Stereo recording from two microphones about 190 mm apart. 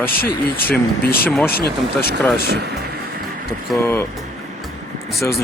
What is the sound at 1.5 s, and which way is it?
Speech, 55° left (ahead or behind).